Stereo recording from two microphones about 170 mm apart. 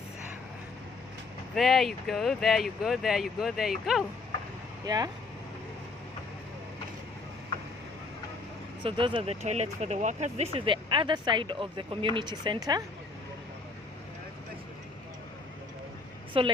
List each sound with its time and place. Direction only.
1.5 s speech: centre (ahead or behind)
4.9 s speech: 25° right (ahead or behind)
8.8 s speech: 30° right (ahead or behind)
16.4 s a woman's voice: 30° right (ahead or behind)